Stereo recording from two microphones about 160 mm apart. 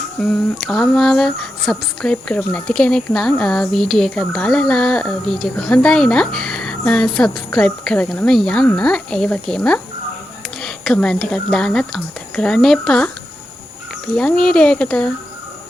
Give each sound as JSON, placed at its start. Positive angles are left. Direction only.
{"t": 0.7, "sound": "speech", "side_deg": 0}
{"t": 14.2, "sound": "speech", "side_deg": 5}